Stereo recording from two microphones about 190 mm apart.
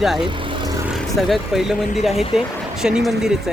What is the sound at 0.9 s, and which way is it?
Speech, centre (ahead or behind).